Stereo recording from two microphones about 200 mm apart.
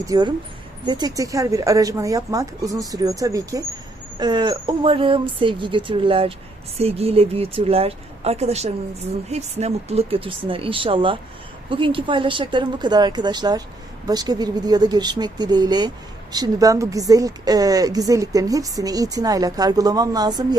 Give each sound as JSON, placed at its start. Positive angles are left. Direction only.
{"t": 0.0, "sound": "a woman's voice", "side_deg": -20}